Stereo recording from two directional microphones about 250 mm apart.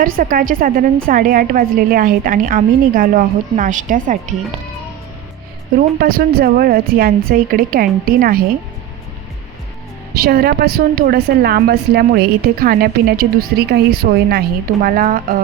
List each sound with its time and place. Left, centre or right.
0.0 s a woman's voice: right
6.0 s a woman's voice: right
10.2 s a woman's voice: right